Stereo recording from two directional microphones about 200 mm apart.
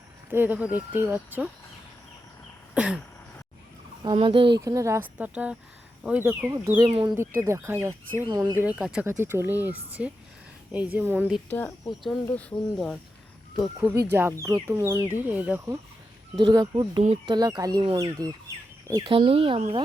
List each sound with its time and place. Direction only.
0.3 s speech: 10° right (ahead or behind)
2.7 s a sound: 5° right (ahead or behind)
4.0 s speech: 25° right (ahead or behind)
4.6 s speech: 15° right (ahead or behind)
8.6 s speech: 5° right (ahead or behind)
11.4 s speech: 10° left (ahead or behind); by 15.8 s 10° right (ahead or behind)
16.4 s speech: 25° right (ahead or behind)
19.1 s speech: 30° right (ahead or behind)